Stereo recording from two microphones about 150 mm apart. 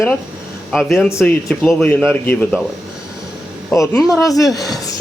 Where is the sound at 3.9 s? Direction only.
Centre (ahead or behind).